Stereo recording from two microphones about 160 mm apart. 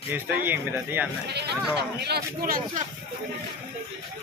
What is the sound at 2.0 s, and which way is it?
Speech, 80° right.